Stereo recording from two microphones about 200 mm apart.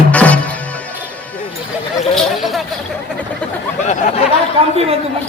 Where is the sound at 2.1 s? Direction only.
Centre (ahead or behind).